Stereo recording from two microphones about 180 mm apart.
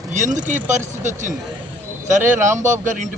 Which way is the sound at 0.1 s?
45° right (ahead or behind).